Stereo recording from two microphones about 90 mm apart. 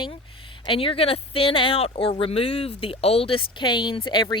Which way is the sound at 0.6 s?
80° left.